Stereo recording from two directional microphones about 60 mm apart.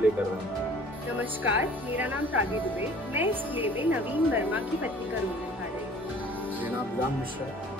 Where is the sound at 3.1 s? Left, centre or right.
Right.